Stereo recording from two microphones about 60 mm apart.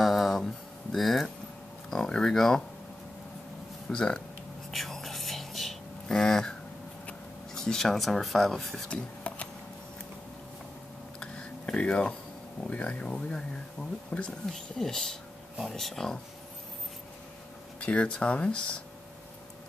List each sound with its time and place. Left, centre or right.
0.0 s a sound: centre
0.9 s speech: centre
3.9 s speech: centre
4.6 s whispering: centre
7.5 s speech: centre
8.9 s a sound: left
11.1 s a sound: centre
12.6 s speech: left
14.8 s speech: centre
17.7 s speech: centre